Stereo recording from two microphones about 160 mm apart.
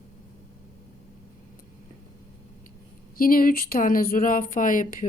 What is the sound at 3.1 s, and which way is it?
Speech, 60° left (ahead or behind).